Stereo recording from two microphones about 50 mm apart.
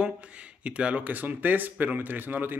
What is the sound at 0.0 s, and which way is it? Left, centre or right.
Speech, right.